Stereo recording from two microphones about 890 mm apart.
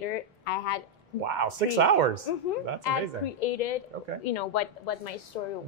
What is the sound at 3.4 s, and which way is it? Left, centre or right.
A woman's voice, left.